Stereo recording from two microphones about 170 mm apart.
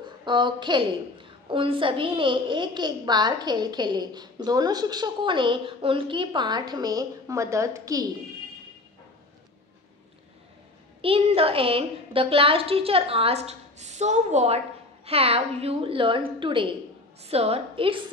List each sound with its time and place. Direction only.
0.0 s a woman's voice: 25° right (ahead or behind)
11.0 s a woman's voice: 35° right (ahead or behind)